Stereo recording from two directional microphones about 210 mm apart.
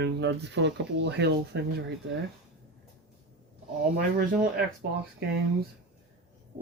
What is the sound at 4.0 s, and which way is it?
Speech, 40° right (ahead or behind).